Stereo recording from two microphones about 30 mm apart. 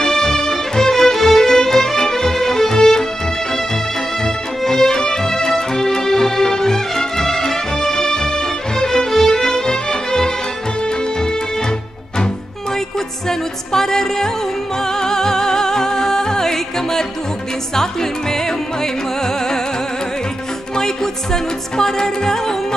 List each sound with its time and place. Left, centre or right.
0.0 s music: centre
4.2 s music: centre
13.3 s music: centre
18.3 s music: centre
20.7 s music: centre